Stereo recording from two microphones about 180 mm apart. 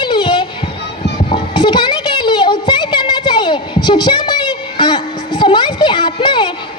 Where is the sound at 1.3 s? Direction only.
25° left (ahead or behind).